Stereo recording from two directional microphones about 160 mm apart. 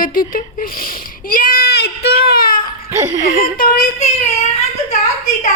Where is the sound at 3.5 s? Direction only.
60° left (ahead or behind).